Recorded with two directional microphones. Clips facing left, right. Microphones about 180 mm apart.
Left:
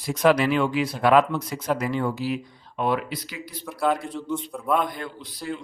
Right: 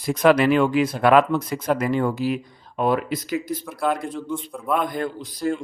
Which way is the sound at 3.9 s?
50° right (ahead or behind).